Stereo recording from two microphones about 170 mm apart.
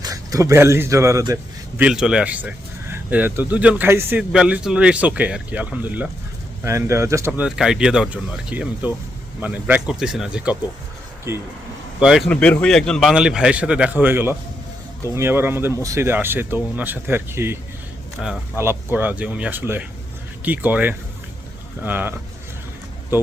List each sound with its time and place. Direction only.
0.0 s speech: 20° right (ahead or behind)
1.8 s speech: 5° right (ahead or behind)
11.9 s a man's voice: 5° right (ahead or behind)
23.1 s speech: 10° right (ahead or behind)